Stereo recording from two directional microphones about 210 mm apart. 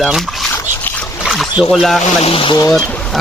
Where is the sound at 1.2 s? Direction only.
Centre (ahead or behind).